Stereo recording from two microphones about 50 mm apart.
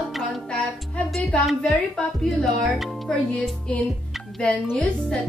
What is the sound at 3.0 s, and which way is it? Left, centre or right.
Speech, centre.